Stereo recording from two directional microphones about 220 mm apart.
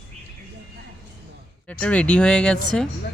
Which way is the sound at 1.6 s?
5° left (ahead or behind).